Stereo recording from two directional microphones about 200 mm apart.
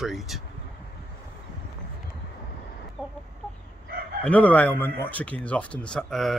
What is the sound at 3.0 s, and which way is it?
Chicken, centre (ahead or behind).